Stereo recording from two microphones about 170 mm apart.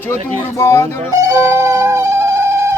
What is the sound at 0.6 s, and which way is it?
Speech, 15° left (ahead or behind).